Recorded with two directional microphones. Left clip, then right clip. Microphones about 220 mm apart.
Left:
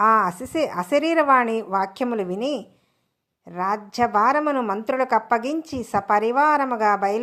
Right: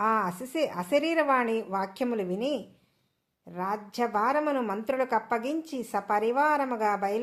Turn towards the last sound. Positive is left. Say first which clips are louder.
# left 7 dB
turn(degrees=25)  # may be behind; listen again after turning